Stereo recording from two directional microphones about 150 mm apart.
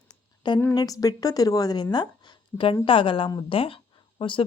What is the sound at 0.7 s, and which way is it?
A woman's voice, 25° left (ahead or behind).